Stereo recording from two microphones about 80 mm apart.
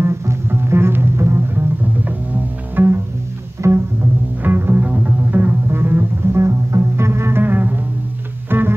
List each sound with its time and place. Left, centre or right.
0.0 s music: right
2.8 s pizzicato: right
4.4 s music: right